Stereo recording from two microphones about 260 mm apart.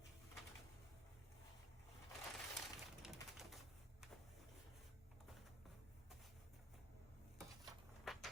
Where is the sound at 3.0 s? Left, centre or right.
Centre.